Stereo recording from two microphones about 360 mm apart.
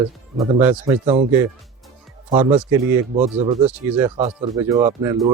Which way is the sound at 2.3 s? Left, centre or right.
Centre.